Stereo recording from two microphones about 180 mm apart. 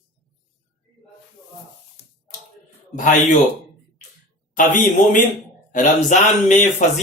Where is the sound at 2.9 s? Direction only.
45° left (ahead or behind).